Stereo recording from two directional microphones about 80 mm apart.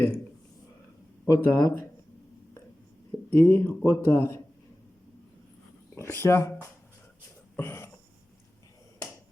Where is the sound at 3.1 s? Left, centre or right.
Centre.